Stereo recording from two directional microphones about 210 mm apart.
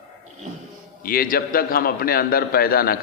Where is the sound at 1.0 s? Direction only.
45° left (ahead or behind).